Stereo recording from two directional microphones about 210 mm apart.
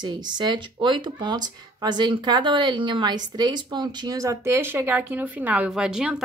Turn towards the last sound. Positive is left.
turn(degrees=-5)  # may be behind; listen again after turning